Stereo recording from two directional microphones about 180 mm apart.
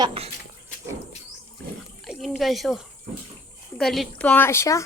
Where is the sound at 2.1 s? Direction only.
Centre (ahead or behind).